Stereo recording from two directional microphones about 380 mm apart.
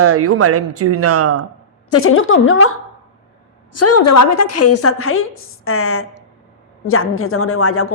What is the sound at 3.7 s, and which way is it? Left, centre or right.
A woman's voice, left.